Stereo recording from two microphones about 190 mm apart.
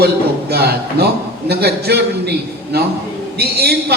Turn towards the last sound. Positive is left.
turn(degrees=-60)  # may be behind; listen again after turning